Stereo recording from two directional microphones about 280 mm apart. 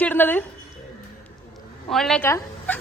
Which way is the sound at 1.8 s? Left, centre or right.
Centre.